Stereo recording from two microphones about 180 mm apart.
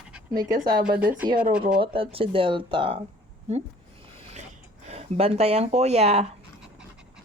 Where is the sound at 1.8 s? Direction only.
30° right (ahead or behind).